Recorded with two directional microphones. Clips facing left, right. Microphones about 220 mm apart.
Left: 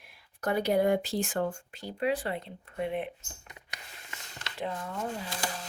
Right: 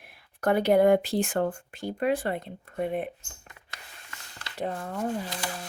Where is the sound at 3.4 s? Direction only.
20° left (ahead or behind).